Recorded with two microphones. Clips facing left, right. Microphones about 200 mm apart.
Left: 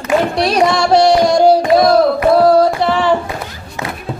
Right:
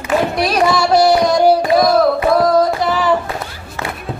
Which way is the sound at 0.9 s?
25° left (ahead or behind).